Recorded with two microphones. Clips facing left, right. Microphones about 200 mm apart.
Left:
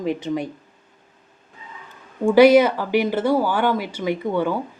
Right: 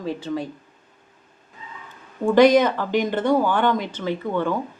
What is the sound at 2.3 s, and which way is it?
Speech, 10° left (ahead or behind).